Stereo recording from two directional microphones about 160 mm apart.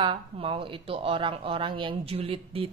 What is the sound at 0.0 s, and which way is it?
Speech, 35° right (ahead or behind).